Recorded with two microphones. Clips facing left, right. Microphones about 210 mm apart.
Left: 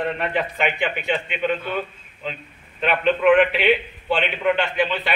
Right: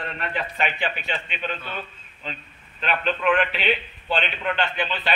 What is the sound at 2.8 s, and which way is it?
A man's voice, 15° left (ahead or behind).